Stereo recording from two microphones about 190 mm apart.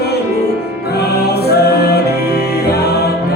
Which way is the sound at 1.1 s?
55° left (ahead or behind).